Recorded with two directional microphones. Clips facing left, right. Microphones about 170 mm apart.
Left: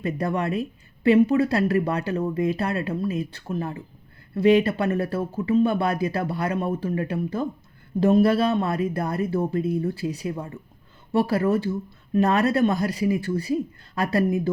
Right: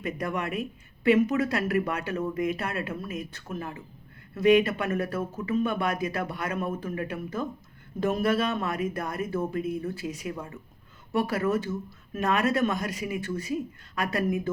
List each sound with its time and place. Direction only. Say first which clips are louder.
0.0 s speech: left 5 dB; 35° left (ahead or behind)